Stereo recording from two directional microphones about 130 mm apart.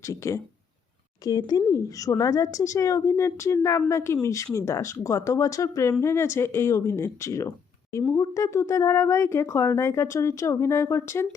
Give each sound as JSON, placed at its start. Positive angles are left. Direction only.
{"t": 0.0, "sound": "speech", "side_deg": 25}